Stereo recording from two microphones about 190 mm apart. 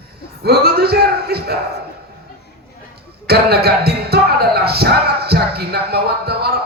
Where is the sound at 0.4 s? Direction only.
55° right (ahead or behind).